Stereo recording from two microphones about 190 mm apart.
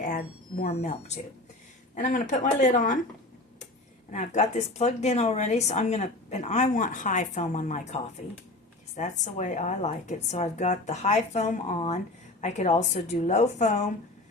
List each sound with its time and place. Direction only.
0.7 s speech: 35° left (ahead or behind)
4.1 s speech: 40° left (ahead or behind)
9.0 s speech: 40° left (ahead or behind)